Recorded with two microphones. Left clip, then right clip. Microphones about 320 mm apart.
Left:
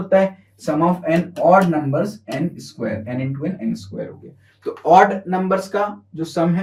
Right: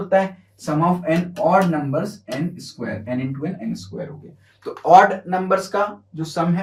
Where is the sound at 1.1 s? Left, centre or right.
Centre.